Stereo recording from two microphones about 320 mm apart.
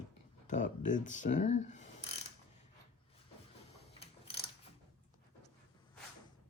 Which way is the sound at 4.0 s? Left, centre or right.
Centre.